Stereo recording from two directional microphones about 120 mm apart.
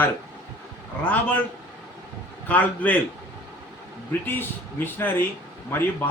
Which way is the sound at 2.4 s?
15° left (ahead or behind).